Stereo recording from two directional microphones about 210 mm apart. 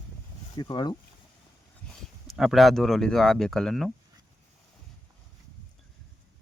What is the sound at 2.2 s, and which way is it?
Speech, centre (ahead or behind).